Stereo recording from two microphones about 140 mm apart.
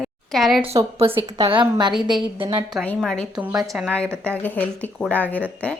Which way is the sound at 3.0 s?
5° left (ahead or behind).